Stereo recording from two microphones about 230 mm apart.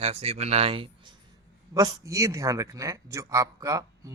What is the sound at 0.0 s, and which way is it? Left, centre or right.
Speech, right.